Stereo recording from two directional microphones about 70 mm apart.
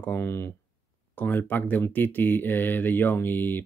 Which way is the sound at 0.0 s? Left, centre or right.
Left.